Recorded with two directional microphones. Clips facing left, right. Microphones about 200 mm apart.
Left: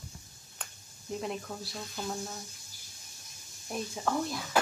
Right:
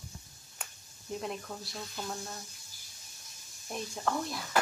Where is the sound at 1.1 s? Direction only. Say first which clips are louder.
Left 2 dB; centre (ahead or behind).